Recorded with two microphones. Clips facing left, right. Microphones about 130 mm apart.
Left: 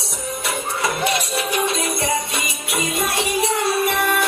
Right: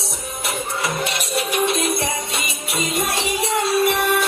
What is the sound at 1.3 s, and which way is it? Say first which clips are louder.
Music: right 1 dB; 25° right (ahead or behind).